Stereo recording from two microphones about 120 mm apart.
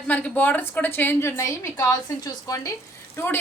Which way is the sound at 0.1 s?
15° left (ahead or behind).